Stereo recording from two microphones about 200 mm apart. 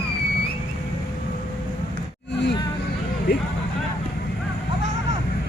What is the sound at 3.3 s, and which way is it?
Speech, 55° left (ahead or behind).